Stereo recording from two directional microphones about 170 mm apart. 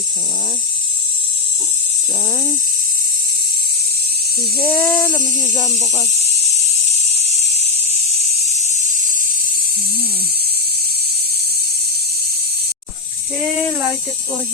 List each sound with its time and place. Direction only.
4.6 s speech: 10° left (ahead or behind)